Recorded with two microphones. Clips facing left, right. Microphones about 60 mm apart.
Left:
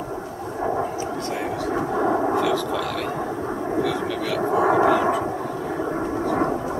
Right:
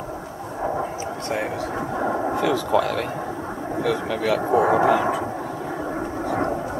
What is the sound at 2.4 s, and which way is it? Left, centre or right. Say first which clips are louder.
Speech: right 2 dB; centre.